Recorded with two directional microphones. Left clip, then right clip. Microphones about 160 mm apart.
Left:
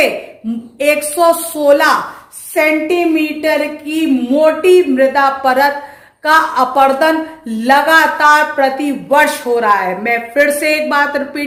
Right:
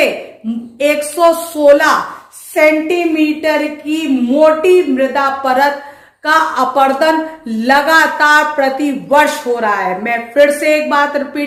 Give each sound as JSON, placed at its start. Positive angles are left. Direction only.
{"t": 0.8, "sound": "speech", "side_deg": 30}